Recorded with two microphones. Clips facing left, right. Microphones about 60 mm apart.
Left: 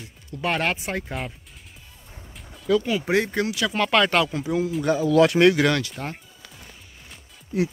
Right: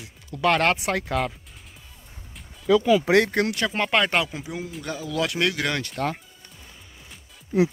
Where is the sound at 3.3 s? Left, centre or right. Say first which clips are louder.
Right 1 dB; right.